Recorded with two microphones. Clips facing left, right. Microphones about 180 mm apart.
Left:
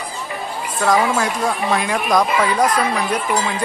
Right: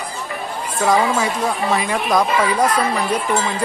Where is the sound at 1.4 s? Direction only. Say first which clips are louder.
Even; centre (ahead or behind).